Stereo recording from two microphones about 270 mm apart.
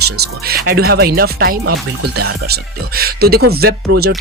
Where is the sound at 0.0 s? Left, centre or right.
Right.